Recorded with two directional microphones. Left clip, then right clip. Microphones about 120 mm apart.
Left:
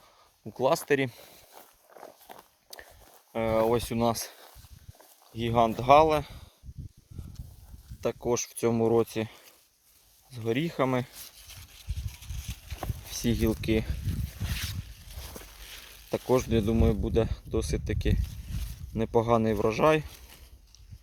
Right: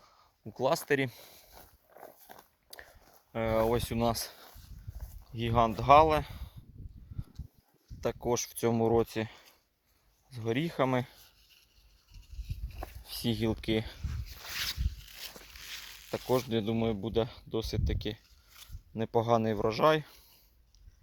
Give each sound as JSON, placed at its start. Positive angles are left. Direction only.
{"t": 0.5, "sound": "speech", "side_deg": 30}
{"t": 3.3, "sound": "speech", "side_deg": 25}
{"t": 5.3, "sound": "speech", "side_deg": 40}
{"t": 6.1, "sound": "speech", "side_deg": 15}
{"t": 8.0, "sound": "speech", "side_deg": 15}
{"t": 13.2, "sound": "speech", "side_deg": 10}
{"t": 16.3, "sound": "speech", "side_deg": 20}